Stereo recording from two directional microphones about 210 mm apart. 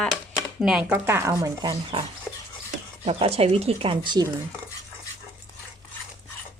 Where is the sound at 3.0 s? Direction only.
30° right (ahead or behind).